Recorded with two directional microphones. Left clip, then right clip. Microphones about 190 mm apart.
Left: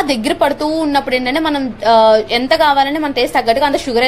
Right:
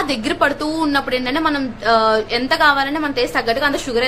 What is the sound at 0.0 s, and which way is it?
A woman's voice, 15° left (ahead or behind).